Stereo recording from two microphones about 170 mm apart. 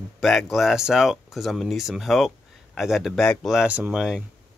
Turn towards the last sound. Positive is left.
turn(degrees=-5)  # may be behind; listen again after turning